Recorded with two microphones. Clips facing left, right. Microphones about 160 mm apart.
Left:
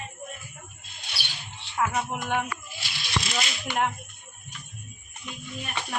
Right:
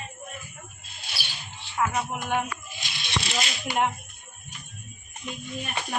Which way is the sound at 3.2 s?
30° right (ahead or behind).